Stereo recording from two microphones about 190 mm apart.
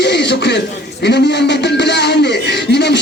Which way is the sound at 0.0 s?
65° left (ahead or behind).